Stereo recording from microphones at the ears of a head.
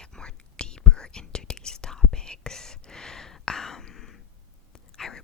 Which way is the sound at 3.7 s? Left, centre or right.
Left.